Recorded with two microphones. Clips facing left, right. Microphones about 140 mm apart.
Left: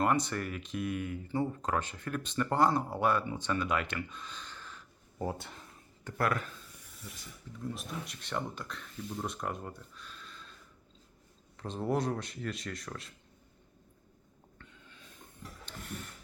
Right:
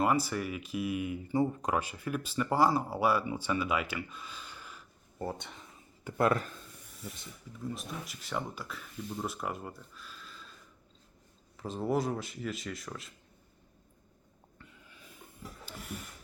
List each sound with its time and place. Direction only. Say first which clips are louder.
0.0 s speech: right 1 dB; 5° right (ahead or behind)
5.2 s speech: left 1 dB; 5° left (ahead or behind)
6.1 s speech: right 4 dB; 25° right (ahead or behind)
7.6 s speech: even; centre (ahead or behind)
11.5 s speech: right 1 dB; 5° right (ahead or behind)
14.6 s snort: right 1 dB; 5° right (ahead or behind)
15.6 s a sound: even; 5° right (ahead or behind)